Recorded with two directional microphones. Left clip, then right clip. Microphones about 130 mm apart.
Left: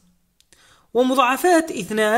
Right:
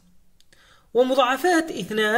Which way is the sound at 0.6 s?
35° left (ahead or behind).